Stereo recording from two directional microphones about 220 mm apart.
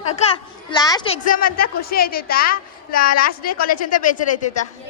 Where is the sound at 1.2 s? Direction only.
40° left (ahead or behind).